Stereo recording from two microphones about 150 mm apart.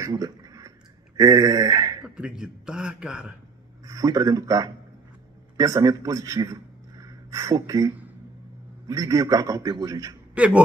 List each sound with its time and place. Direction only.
0.0 s a sound: 25° right (ahead or behind)
2.0 s a man's voice: 5° right (ahead or behind)
3.8 s a man's voice: 25° right (ahead or behind)
10.3 s speech: 10° right (ahead or behind)